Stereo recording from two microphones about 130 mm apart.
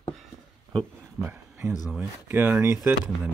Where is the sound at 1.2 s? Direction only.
15° right (ahead or behind).